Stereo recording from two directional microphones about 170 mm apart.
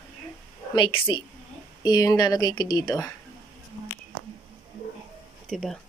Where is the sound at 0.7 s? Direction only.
30° left (ahead or behind).